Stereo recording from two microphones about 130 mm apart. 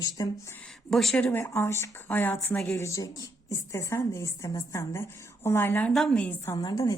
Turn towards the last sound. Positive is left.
turn(degrees=30)  # may be behind; listen again after turning